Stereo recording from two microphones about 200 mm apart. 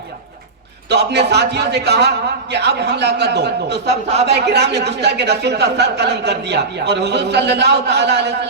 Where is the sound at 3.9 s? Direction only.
30° right (ahead or behind).